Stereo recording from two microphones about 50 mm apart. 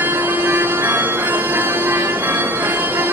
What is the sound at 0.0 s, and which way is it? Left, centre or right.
Music, right.